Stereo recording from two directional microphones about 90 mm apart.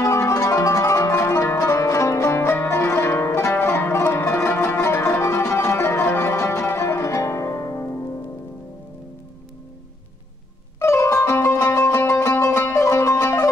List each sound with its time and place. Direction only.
0.0 s music: 35° left (ahead or behind)
10.8 s music: 30° left (ahead or behind)